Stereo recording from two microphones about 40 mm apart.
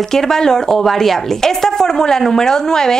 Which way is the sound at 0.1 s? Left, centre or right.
Centre.